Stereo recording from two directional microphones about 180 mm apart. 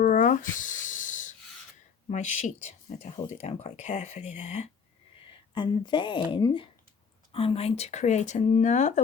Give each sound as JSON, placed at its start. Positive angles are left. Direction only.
{"t": 0.0, "sound": "a sound", "side_deg": 45}
{"t": 2.0, "sound": "speech", "side_deg": 40}
{"t": 5.5, "sound": "a woman's voice", "side_deg": 25}